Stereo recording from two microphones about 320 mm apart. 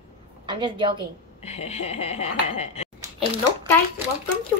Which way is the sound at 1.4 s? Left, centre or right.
Centre.